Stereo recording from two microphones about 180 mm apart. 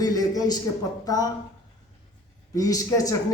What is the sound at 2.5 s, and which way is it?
Speech, 20° left (ahead or behind).